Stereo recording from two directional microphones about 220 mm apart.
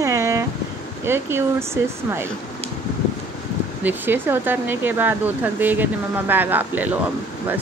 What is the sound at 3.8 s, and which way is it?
Speech, 10° right (ahead or behind).